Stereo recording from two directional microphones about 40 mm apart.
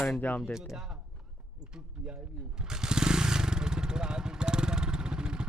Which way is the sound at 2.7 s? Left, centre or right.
Centre.